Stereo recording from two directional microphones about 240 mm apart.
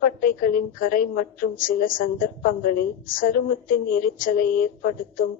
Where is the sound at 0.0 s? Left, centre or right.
Left.